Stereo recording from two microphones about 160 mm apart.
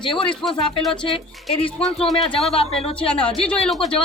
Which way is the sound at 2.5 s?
40° left (ahead or behind).